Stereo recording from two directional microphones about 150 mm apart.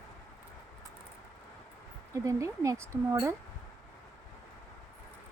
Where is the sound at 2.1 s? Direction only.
20° right (ahead or behind).